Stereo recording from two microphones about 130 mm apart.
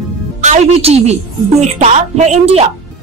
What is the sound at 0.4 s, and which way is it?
A woman's voice, 65° right (ahead or behind).